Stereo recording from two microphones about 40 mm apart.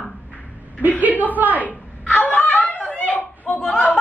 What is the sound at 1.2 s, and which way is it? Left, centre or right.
Speech, right.